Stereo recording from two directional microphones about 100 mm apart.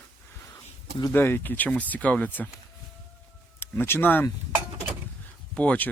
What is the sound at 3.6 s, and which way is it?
Speech, 25° left (ahead or behind).